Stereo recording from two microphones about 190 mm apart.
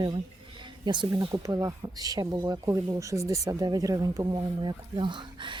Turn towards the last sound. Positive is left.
turn(degrees=-25)  # may be behind; listen again after turning